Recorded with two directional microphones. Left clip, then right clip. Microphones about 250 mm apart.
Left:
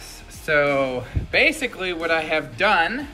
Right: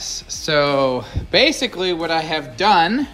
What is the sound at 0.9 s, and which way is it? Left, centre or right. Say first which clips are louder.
Speech: right 6 dB; right.